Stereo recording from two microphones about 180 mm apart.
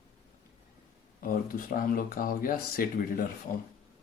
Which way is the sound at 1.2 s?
50° left (ahead or behind).